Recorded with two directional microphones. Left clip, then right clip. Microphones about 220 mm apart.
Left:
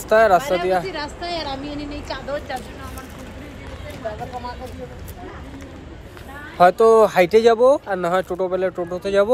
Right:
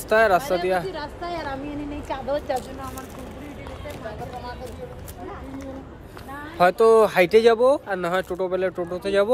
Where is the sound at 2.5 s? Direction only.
50° right (ahead or behind).